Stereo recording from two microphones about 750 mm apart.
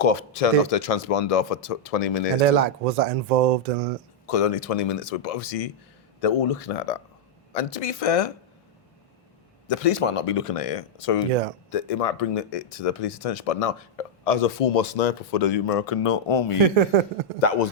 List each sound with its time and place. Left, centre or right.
0.0 s speech: left
2.4 s speech: right
4.3 s speech: left
9.6 s speech: left
17.4 s speech: left